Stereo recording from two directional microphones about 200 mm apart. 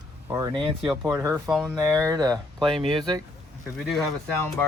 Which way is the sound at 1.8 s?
15° right (ahead or behind).